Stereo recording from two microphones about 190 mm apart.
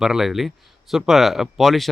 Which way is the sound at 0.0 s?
Centre (ahead or behind).